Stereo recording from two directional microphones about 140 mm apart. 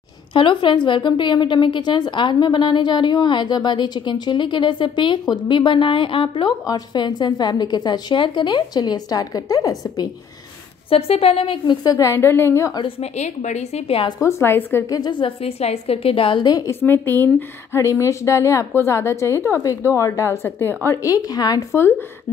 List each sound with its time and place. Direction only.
0.3 s a woman's voice: 35° left (ahead or behind)
10.9 s a woman's voice: 45° left (ahead or behind); by 12.8 s 20° left (ahead or behind)
12.8 s a woman's voice: 50° left (ahead or behind)
14.2 s a woman's voice: 15° left (ahead or behind)
15.0 s a woman's voice: 35° left (ahead or behind)
16.8 s a woman's voice: 15° left (ahead or behind)